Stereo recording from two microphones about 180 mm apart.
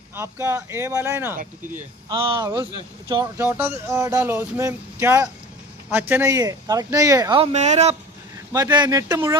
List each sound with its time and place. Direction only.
0.2 s speech: 15° right (ahead or behind)
2.0 s speech: 30° right (ahead or behind)
3.3 s speech: 10° right (ahead or behind)
7.5 s speech: 40° right (ahead or behind)
8.5 s speech: 20° right (ahead or behind)